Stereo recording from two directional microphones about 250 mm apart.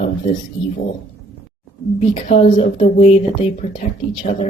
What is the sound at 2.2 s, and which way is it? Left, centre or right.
Speech, left.